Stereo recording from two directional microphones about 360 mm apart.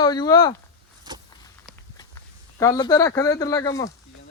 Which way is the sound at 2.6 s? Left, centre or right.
Centre.